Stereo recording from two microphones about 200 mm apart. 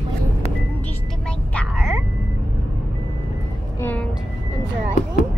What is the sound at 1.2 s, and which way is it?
Vehicle, 5° left (ahead or behind).